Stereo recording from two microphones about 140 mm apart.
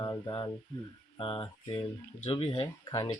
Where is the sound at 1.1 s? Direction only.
40° left (ahead or behind).